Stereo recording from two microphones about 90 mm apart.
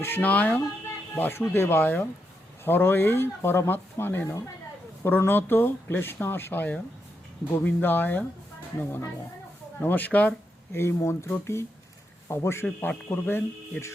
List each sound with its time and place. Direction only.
0.0 s speech: 20° left (ahead or behind)
9.8 s speech: 20° left (ahead or behind)
10.7 s speech: 30° left (ahead or behind)
12.6 s speech: 15° left (ahead or behind)